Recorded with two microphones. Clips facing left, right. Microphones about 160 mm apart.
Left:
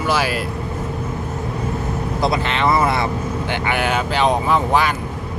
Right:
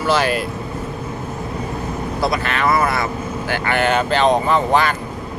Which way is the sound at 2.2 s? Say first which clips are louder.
Left 1 dB; 20° left (ahead or behind).